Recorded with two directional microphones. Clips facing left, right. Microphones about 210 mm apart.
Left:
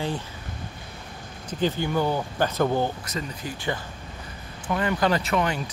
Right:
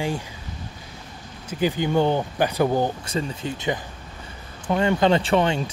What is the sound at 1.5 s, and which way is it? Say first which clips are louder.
Speech: right 2 dB; 10° right (ahead or behind).